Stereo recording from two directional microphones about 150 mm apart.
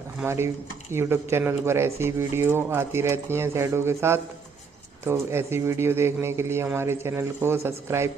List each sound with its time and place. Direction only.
0.2 s speech: 15° right (ahead or behind)